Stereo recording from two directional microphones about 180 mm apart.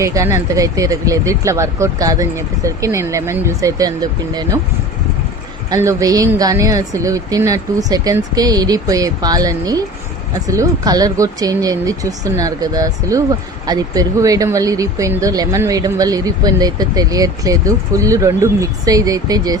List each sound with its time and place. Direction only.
0.0 s speech: 15° right (ahead or behind)
5.7 s speech: 15° right (ahead or behind)